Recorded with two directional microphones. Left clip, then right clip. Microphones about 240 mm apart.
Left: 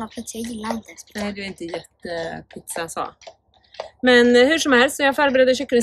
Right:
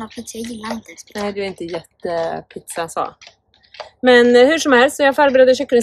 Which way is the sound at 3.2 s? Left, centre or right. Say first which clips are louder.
Left 1 dB; left.